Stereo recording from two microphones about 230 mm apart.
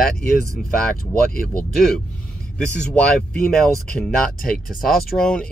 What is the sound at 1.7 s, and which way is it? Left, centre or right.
Speech, centre.